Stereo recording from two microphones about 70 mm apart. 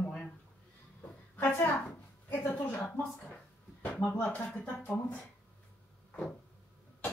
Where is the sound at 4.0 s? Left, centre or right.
Centre.